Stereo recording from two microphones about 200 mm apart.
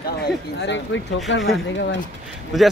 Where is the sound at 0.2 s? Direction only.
60° left (ahead or behind).